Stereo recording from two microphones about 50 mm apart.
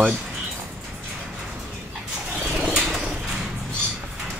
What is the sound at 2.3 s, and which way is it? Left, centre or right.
Bird, centre.